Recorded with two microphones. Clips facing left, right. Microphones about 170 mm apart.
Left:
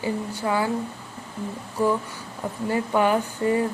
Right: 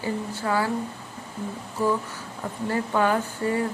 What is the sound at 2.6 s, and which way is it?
Speech, 15° left (ahead or behind).